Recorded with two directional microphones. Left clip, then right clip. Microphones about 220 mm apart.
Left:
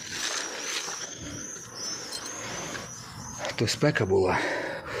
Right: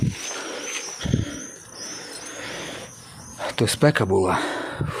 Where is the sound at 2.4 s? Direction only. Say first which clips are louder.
Right 6 dB; 35° right (ahead or behind).